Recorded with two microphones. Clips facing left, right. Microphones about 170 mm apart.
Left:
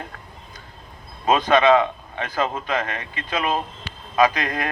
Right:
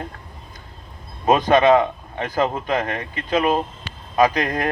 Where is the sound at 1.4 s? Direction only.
15° right (ahead or behind).